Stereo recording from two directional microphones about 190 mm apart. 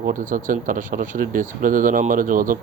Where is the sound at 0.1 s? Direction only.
45° right (ahead or behind).